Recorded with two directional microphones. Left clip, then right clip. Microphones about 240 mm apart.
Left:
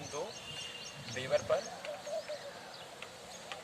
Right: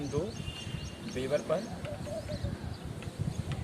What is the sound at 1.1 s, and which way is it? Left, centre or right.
Speech, centre.